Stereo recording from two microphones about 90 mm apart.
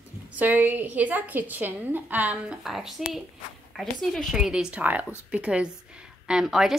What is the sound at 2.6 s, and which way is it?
A woman's voice, 5° right (ahead or behind).